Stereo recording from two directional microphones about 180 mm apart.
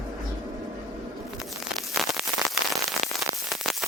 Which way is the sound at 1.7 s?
Centre (ahead or behind).